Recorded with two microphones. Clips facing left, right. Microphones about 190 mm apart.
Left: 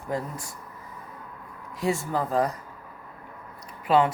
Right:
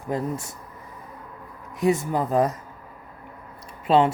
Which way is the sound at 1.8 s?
20° right (ahead or behind).